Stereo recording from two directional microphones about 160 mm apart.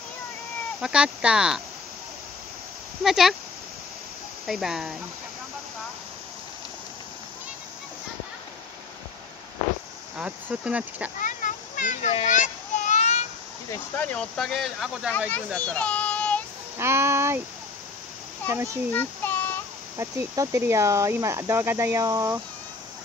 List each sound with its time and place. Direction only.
0.7 s speech: 5° right (ahead or behind)
3.0 s speech: centre (ahead or behind)
4.5 s speech: centre (ahead or behind)
10.1 s speech: 5° right (ahead or behind)
11.1 s a sound: 55° left (ahead or behind)
13.7 s speech: 10° left (ahead or behind)
15.1 s a child's voice: 10° left (ahead or behind)
16.7 s speech: 15° right (ahead or behind)
18.5 s speech: 15° right (ahead or behind)
18.9 s child singing: 10° left (ahead or behind)
20.0 s speech: 15° right (ahead or behind)